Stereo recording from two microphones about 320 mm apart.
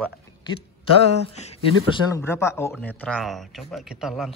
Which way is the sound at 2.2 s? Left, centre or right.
Centre.